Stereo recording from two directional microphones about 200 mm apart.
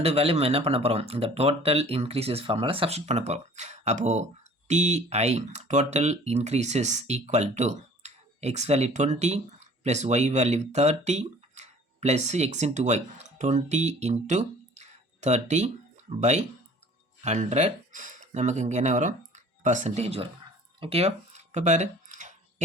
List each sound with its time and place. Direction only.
0.0 s speech: 30° right (ahead or behind)
17.2 s speech: 35° right (ahead or behind)
20.7 s a sound: 30° right (ahead or behind)